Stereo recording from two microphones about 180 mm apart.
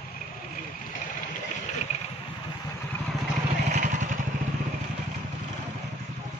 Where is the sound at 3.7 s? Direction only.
45° right (ahead or behind).